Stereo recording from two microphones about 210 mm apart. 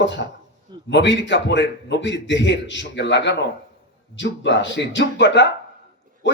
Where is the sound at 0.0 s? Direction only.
60° left (ahead or behind).